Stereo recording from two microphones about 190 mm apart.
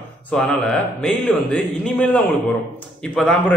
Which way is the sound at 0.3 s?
5° left (ahead or behind).